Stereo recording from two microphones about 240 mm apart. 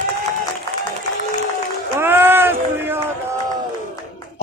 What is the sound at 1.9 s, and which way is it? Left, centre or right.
Run, centre.